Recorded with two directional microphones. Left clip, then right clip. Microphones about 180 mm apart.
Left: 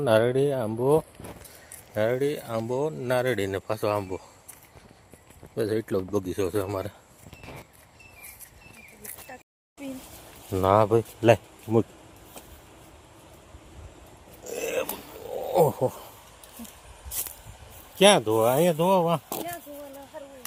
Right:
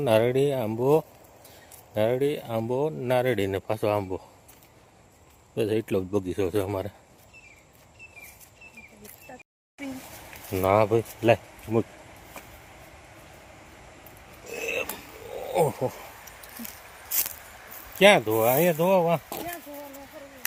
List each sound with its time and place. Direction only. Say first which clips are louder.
0.0 s speech: even; centre (ahead or behind)
2.0 s speech: right 1 dB; 20° right (ahead or behind)
5.5 s speech: right 1 dB; 20° right (ahead or behind)
10.5 s speech: left 1 dB; 15° left (ahead or behind)
14.5 s a sound: left 1 dB; 35° left (ahead or behind)
15.6 s speech: left 3 dB; 15° left (ahead or behind)
17.9 s speech: right 1 dB; 15° left (ahead or behind)